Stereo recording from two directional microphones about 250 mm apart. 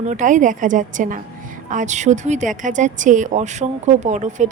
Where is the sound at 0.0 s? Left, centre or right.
Right.